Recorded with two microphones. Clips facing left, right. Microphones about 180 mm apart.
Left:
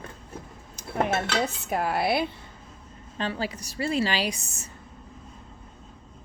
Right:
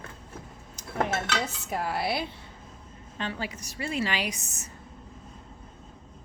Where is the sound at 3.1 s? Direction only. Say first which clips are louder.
Left 4 dB; 35° left (ahead or behind).